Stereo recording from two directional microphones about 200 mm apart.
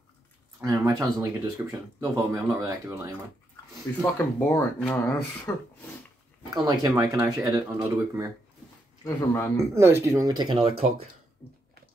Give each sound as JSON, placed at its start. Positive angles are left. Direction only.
{"t": 0.6, "sound": "speech", "side_deg": -15}
{"t": 4.0, "sound": "speech", "side_deg": 15}
{"t": 6.5, "sound": "speech", "side_deg": -20}
{"t": 9.0, "sound": "speech", "side_deg": 10}
{"t": 9.8, "sound": "speech", "side_deg": -15}